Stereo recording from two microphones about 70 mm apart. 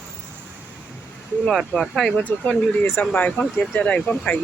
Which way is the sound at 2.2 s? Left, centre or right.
Left.